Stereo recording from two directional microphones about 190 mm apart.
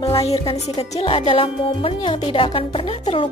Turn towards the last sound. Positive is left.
turn(degrees=30)  # may be behind; listen again after turning